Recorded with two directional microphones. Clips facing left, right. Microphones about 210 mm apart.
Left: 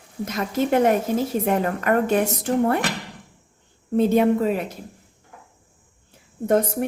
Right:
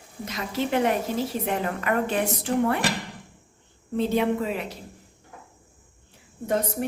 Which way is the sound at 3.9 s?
50° left (ahead or behind).